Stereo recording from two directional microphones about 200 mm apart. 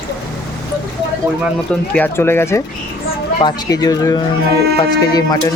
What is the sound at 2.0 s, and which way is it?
Speech, 10° left (ahead or behind).